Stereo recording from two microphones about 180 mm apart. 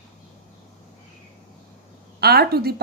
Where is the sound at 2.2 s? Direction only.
60° right (ahead or behind).